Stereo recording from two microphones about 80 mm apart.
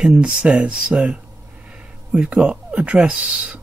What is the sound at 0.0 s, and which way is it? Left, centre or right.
Speech, centre.